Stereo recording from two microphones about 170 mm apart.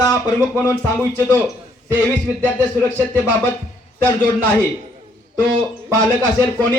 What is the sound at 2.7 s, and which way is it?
Speech, 10° left (ahead or behind).